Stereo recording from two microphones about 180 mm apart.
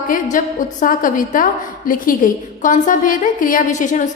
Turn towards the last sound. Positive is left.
turn(degrees=45)  # may be behind; listen again after turning